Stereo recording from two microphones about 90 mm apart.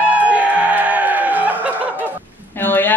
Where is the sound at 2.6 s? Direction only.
20° left (ahead or behind).